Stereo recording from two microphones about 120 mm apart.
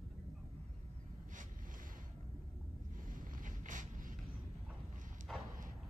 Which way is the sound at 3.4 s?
90° right.